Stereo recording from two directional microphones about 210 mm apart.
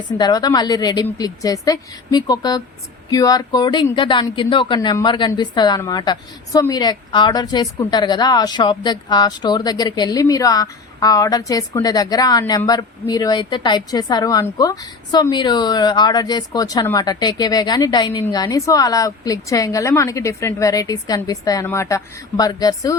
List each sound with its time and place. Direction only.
0.2 s a woman's voice: 20° left (ahead or behind)